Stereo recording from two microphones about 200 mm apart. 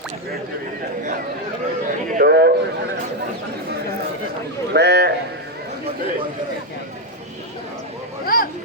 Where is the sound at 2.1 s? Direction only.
50° right (ahead or behind).